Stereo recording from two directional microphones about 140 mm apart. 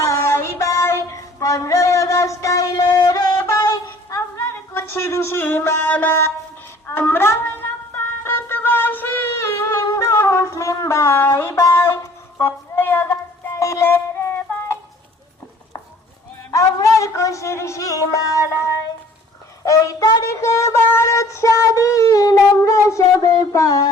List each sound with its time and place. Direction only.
0.0 s child singing: 20° left (ahead or behind)
6.8 s speech: 15° left (ahead or behind)
7.9 s music: 15° left (ahead or behind)
12.4 s child singing: 15° left (ahead or behind)
16.5 s a woman's voice: 25° left (ahead or behind)